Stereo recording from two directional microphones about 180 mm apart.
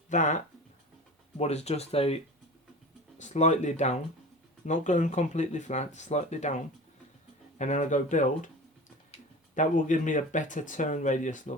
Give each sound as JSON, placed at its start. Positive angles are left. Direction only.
{"t": 0.1, "sound": "speech", "side_deg": 40}
{"t": 7.6, "sound": "speech", "side_deg": 40}
{"t": 9.6, "sound": "speech", "side_deg": 45}